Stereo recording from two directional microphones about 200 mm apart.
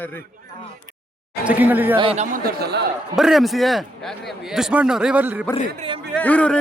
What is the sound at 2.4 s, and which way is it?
Speech, 55° right (ahead or behind).